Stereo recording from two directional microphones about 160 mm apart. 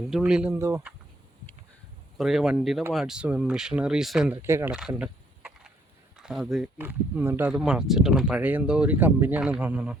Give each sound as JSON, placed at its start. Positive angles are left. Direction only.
{"t": 0.1, "sound": "speech", "side_deg": -5}
{"t": 0.5, "sound": "speech", "side_deg": -15}
{"t": 2.1, "sound": "speech", "side_deg": 0}
{"t": 4.4, "sound": "speech", "side_deg": -15}
{"t": 4.7, "sound": "a sound", "side_deg": -5}
{"t": 6.1, "sound": "speech", "side_deg": -5}
{"t": 6.7, "sound": "speech", "side_deg": -10}